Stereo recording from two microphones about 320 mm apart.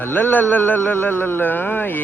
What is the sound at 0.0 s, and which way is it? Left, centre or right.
A man's voice, centre.